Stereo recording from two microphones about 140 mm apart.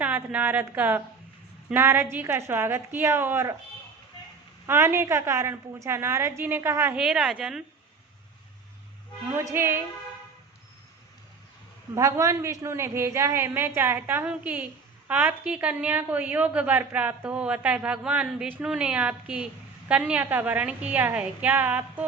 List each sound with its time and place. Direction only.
0.0 s a woman's voice: 10° right (ahead or behind)
4.6 s a woman's voice: 20° right (ahead or behind)
6.9 s speech: 5° right (ahead or behind)
9.3 s speech: 20° right (ahead or behind)
11.9 s a woman's voice: 20° right (ahead or behind)